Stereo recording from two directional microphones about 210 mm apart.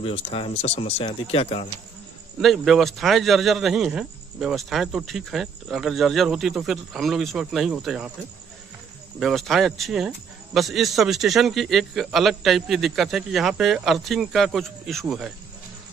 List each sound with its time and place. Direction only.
0.0 s speech: 25° left (ahead or behind)
2.4 s a man's voice: centre (ahead or behind)
9.2 s a man's voice: centre (ahead or behind)